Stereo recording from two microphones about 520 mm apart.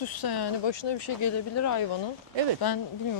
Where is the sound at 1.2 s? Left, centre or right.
Left.